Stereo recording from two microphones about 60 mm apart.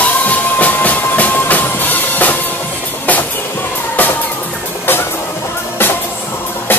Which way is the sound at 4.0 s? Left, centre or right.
Left.